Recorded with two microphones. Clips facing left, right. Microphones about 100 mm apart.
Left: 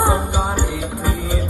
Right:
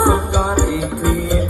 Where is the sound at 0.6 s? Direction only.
45° right (ahead or behind).